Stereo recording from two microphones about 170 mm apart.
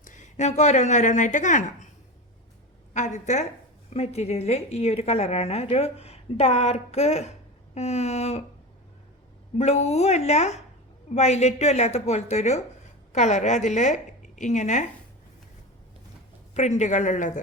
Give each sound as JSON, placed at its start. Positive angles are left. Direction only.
{"t": 0.0, "sound": "speech", "side_deg": 50}
{"t": 2.9, "sound": "a woman's voice", "side_deg": 45}
{"t": 9.6, "sound": "a woman's voice", "side_deg": 40}
{"t": 16.6, "sound": "a woman's voice", "side_deg": 45}